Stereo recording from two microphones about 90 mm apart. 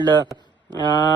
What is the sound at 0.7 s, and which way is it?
Speech, 50° left (ahead or behind).